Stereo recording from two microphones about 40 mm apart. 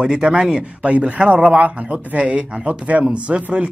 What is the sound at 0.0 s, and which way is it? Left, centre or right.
Speech, right.